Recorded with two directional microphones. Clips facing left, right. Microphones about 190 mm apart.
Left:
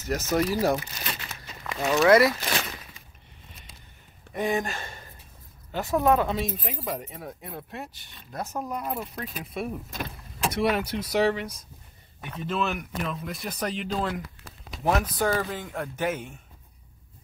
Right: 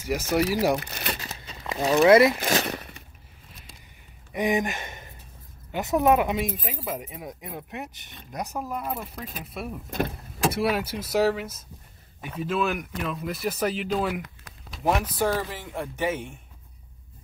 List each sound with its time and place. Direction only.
0.0 s speech: 10° right (ahead or behind)
1.2 s zipper: 30° right (ahead or behind)
1.6 s speech: 20° right (ahead or behind)
2.7 s a sound: 65° right (ahead or behind)
4.3 s speech: 15° right (ahead or behind)
8.5 s speech: 5° right (ahead or behind)
9.8 s speech: 60° right (ahead or behind)
10.5 s speech: 5° right (ahead or behind)